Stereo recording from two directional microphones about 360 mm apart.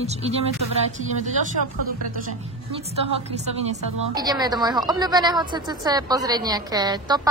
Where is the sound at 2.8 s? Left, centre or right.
Centre.